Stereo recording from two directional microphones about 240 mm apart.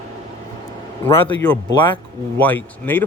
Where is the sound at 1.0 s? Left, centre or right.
Centre.